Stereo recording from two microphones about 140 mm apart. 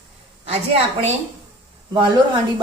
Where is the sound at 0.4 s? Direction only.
50° right (ahead or behind).